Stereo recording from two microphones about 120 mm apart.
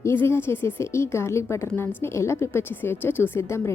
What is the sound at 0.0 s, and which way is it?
A woman's voice, 20° left (ahead or behind).